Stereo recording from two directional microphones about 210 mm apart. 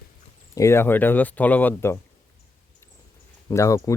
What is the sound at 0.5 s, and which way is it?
Speech, 15° left (ahead or behind).